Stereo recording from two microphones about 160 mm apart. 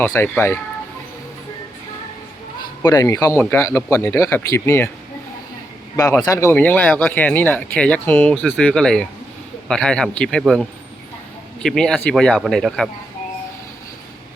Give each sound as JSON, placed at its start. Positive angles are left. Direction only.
{"t": 0.0, "sound": "speech", "side_deg": 15}
{"t": 2.6, "sound": "speech", "side_deg": 25}
{"t": 6.2, "sound": "speech", "side_deg": 20}